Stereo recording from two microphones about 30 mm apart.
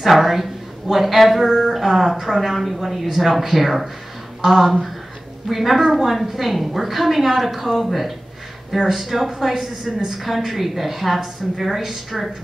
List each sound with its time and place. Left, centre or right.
0.0 s a woman's voice: centre